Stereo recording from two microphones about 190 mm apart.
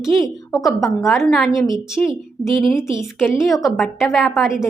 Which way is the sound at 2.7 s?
15° left (ahead or behind).